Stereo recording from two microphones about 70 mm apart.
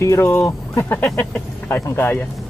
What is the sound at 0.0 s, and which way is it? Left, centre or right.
Speech, left.